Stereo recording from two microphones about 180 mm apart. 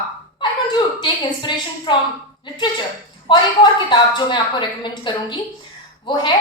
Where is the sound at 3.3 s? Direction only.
25° left (ahead or behind).